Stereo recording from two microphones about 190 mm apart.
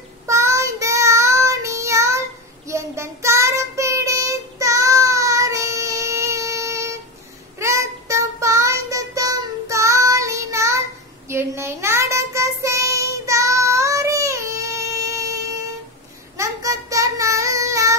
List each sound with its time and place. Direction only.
0.3 s child singing: 15° right (ahead or behind)